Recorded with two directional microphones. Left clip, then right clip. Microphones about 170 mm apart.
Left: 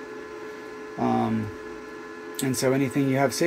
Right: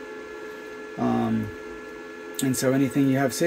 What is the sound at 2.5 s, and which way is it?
Speech, 15° right (ahead or behind).